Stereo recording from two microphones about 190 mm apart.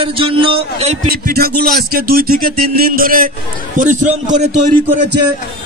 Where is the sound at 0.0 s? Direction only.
30° right (ahead or behind).